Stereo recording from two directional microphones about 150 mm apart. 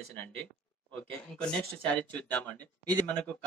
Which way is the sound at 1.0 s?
5° left (ahead or behind).